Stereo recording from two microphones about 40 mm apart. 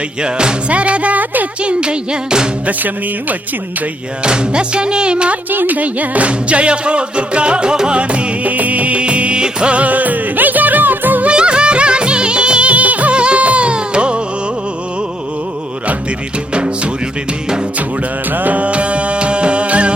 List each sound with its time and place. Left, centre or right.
0.2 s speech: right
1.6 s music: right
2.6 s music: right
4.2 s music: right
5.5 s music: right
8.4 s music: right
11.3 s music: right
16.6 s music: right
18.3 s music: right